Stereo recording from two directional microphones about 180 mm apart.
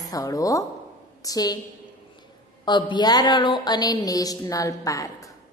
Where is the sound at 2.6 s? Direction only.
25° left (ahead or behind).